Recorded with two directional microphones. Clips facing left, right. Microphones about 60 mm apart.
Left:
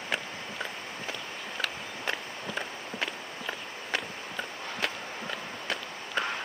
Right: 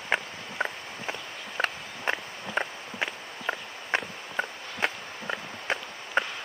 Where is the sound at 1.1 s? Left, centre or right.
Right.